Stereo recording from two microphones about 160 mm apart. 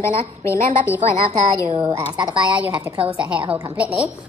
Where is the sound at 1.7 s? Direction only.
25° right (ahead or behind).